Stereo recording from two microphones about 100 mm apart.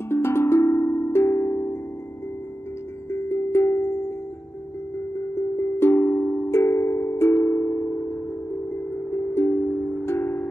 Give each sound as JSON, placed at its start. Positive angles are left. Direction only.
{"t": 0.1, "sound": "music", "side_deg": 25}
{"t": 3.1, "sound": "music", "side_deg": 25}
{"t": 5.6, "sound": "music", "side_deg": 25}
{"t": 9.1, "sound": "music", "side_deg": 25}
{"t": 10.0, "sound": "wind chime", "side_deg": 25}